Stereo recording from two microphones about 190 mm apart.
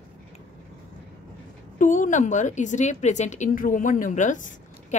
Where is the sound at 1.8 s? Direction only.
40° left (ahead or behind).